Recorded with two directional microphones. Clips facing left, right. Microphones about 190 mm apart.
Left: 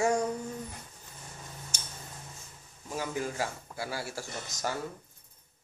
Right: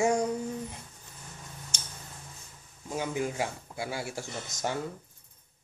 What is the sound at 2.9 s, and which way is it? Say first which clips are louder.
Speech: right 2 dB; 20° right (ahead or behind).